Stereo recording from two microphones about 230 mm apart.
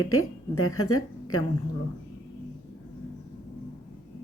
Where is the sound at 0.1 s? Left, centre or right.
Left.